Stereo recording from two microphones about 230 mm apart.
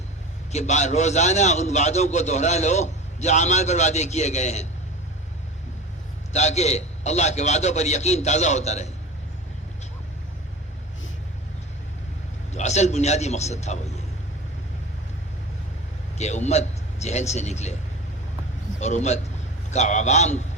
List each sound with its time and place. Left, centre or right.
0.5 s a man's voice: left
6.3 s a man's voice: left
12.5 s a man's voice: left
16.1 s a man's voice: left
18.8 s a man's voice: left